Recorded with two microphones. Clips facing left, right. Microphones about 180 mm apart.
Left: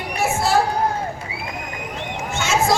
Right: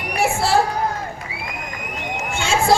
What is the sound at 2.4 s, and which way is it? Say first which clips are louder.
Run: right 1 dB; 30° right (ahead or behind).